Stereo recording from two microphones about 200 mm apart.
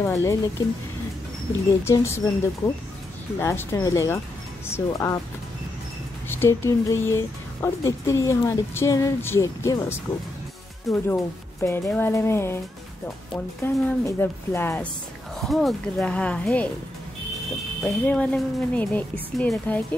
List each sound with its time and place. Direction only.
0.0 s speech: 15° left (ahead or behind)
1.9 s speech: 15° left (ahead or behind)
6.2 s speech: 10° left (ahead or behind)
10.9 s speech: centre (ahead or behind)
11.6 s speech: 10° left (ahead or behind)
13.8 s speech: 10° left (ahead or behind)
15.4 s speech: centre (ahead or behind)
17.8 s speech: 5° left (ahead or behind)